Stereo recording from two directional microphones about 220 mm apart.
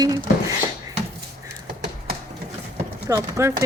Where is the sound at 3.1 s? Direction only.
15° right (ahead or behind).